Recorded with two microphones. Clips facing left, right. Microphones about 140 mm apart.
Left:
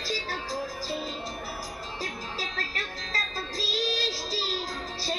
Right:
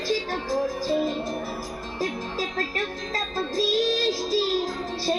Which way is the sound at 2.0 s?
45° right (ahead or behind).